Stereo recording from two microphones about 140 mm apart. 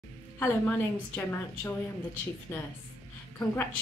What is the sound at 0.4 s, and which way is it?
A woman's voice, 15° left (ahead or behind).